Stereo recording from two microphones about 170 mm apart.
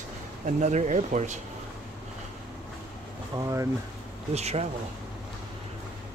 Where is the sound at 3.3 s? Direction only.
20° right (ahead or behind).